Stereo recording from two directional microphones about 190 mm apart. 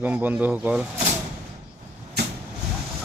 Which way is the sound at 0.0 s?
10° right (ahead or behind).